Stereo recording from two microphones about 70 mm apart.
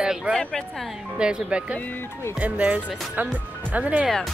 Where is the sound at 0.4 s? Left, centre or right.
Centre.